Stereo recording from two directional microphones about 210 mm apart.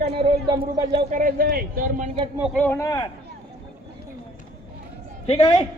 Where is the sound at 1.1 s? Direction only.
40° right (ahead or behind).